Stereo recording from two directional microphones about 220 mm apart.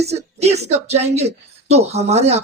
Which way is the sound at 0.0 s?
30° right (ahead or behind).